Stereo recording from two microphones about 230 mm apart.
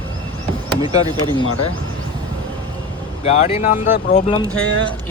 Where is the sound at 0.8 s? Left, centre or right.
Centre.